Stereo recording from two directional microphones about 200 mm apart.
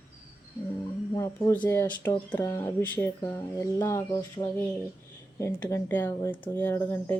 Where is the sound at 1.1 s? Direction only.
15° left (ahead or behind).